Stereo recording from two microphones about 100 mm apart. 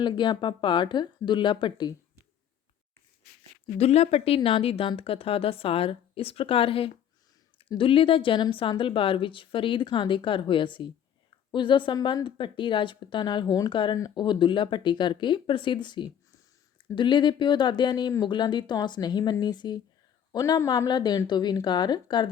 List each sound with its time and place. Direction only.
0.0 s speech: 50° left (ahead or behind)
3.8 s speech: 90° left
4.4 s a woman's voice: 70° left (ahead or behind); by 22.3 s 45° left (ahead or behind)